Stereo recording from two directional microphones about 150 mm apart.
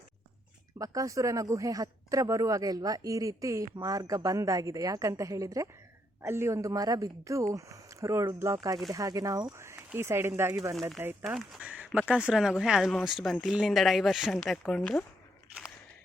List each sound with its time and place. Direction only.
0.8 s speech: 25° right (ahead or behind)
10.8 s speech: centre (ahead or behind)